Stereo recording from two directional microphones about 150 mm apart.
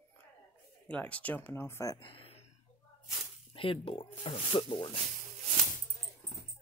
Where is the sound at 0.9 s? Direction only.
10° left (ahead or behind); by 2.4 s 35° left (ahead or behind).